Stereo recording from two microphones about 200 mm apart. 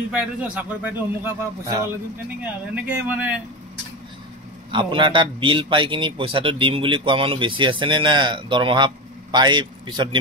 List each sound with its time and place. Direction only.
0.1 s a man's voice: 5° right (ahead or behind)
4.6 s a man's voice: 25° right (ahead or behind)